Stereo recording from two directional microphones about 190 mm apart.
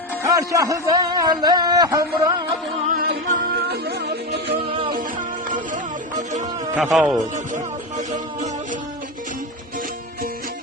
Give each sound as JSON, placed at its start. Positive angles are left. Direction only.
{"t": 0.2, "sound": "a man's voice", "side_deg": -15}
{"t": 2.8, "sound": "music", "side_deg": -45}
{"t": 4.4, "sound": "music", "side_deg": -30}
{"t": 5.7, "sound": "music", "side_deg": -40}
{"t": 6.9, "sound": "speech", "side_deg": 0}
{"t": 7.3, "sound": "music", "side_deg": -40}